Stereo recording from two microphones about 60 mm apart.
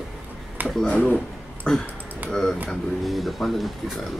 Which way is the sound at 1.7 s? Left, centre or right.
Centre.